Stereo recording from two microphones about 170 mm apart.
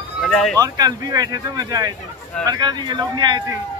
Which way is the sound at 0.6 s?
20° right (ahead or behind).